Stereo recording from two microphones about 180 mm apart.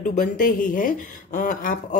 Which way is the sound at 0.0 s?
45° left (ahead or behind).